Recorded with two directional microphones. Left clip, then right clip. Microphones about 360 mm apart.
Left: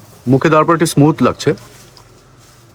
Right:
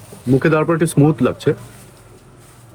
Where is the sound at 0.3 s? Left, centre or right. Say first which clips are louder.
Left 5 dB; centre.